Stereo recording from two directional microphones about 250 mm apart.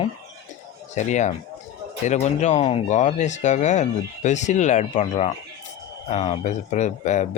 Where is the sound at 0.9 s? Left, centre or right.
Left.